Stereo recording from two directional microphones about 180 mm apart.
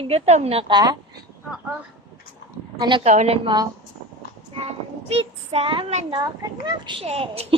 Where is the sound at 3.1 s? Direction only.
40° right (ahead or behind).